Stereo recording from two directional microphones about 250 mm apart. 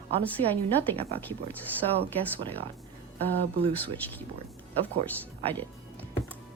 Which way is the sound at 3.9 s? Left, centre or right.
Centre.